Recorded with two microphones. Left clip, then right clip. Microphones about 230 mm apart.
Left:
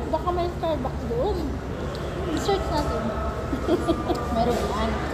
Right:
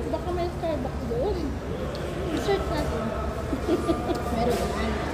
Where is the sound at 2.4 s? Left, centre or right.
Centre.